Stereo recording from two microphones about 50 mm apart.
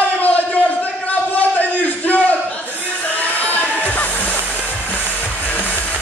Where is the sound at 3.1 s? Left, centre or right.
Left.